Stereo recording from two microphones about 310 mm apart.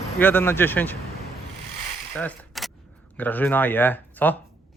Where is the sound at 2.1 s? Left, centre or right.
Centre.